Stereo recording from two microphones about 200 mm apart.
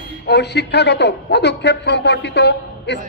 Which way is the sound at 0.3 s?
55° left (ahead or behind).